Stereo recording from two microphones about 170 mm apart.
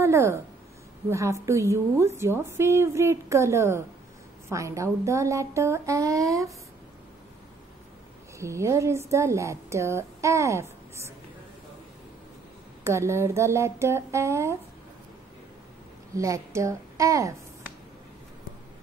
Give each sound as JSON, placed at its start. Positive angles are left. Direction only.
{"t": 0.0, "sound": "a woman's voice", "side_deg": -15}
{"t": 8.4, "sound": "a woman's voice", "side_deg": -15}
{"t": 12.8, "sound": "a woman's voice", "side_deg": -15}
{"t": 16.2, "sound": "a woman's voice", "side_deg": -20}